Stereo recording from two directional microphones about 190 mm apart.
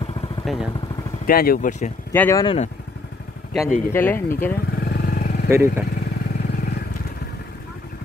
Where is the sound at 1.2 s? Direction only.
50° left (ahead or behind).